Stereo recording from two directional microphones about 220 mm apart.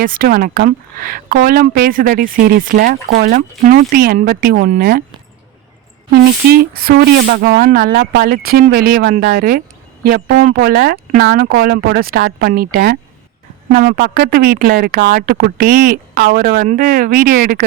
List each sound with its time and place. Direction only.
0.0 s speech: 40° right (ahead or behind)
6.5 s speech: 45° right (ahead or behind)